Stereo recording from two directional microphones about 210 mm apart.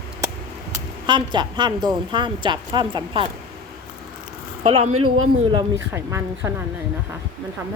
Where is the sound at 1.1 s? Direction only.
20° right (ahead or behind).